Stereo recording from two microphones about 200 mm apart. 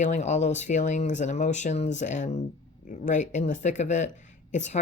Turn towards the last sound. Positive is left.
turn(degrees=35)  # may be behind; listen again after turning